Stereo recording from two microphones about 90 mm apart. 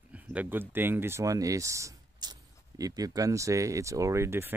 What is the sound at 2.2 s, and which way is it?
Speech, 45° right (ahead or behind).